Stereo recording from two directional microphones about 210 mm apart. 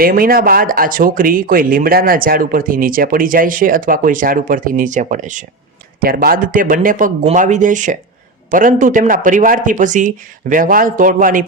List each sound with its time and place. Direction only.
0.0 s speech: 45° right (ahead or behind)